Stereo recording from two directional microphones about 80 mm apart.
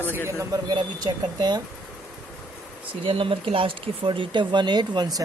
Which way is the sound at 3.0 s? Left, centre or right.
Right.